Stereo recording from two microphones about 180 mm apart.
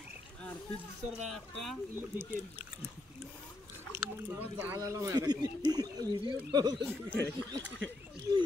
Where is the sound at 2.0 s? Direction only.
10° right (ahead or behind).